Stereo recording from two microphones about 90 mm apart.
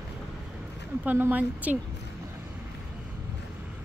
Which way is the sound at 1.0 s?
20° right (ahead or behind).